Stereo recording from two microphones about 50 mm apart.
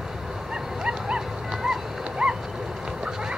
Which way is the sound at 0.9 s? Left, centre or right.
Centre.